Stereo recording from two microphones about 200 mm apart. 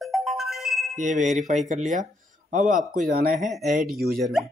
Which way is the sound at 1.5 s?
35° right (ahead or behind).